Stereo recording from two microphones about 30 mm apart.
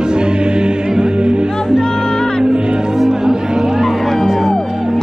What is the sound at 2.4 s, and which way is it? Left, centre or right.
Music, right.